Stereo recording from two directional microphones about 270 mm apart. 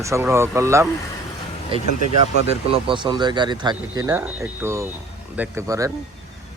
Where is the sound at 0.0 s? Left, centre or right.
Centre.